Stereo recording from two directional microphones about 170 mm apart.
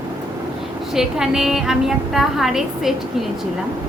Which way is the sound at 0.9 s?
5° right (ahead or behind).